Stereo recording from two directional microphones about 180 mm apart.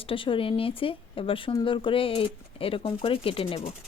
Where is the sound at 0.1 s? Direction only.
30° left (ahead or behind).